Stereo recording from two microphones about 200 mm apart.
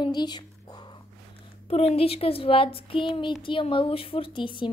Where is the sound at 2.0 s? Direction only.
30° left (ahead or behind).